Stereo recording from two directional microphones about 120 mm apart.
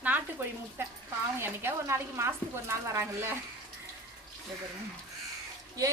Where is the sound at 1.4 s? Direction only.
20° right (ahead or behind).